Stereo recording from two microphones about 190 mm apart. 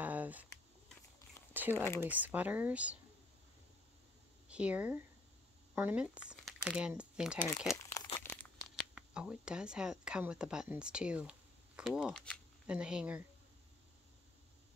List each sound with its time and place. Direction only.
0.0 s a sound: 10° right (ahead or behind)
1.5 s crumpling: 10° right (ahead or behind)
2.0 s speech: 10° right (ahead or behind)
4.5 s speech: 5° right (ahead or behind)
7.6 s crumpling: 15° left (ahead or behind)
8.2 s speech: 10° left (ahead or behind)